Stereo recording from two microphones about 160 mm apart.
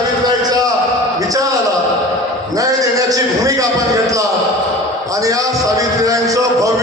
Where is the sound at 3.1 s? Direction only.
20° right (ahead or behind).